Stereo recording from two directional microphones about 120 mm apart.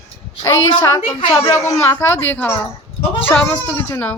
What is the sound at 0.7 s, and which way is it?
A child's voice, 35° left (ahead or behind).